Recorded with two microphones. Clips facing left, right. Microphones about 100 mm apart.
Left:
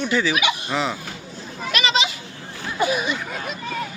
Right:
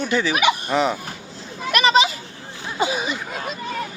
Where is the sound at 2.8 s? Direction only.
30° right (ahead or behind).